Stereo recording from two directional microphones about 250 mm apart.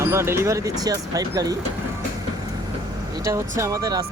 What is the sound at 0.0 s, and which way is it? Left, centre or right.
Speech, centre.